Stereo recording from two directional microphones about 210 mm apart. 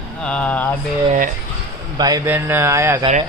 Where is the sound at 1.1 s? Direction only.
40° right (ahead or behind).